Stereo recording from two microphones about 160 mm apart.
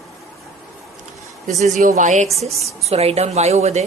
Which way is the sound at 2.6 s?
40° right (ahead or behind).